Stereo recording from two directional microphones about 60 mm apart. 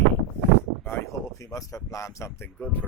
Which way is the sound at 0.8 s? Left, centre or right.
Left.